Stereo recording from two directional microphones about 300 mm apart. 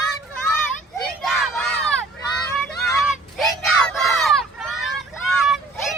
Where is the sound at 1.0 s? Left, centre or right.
Centre.